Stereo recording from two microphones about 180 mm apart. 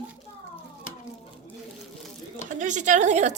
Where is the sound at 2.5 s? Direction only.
45° right (ahead or behind).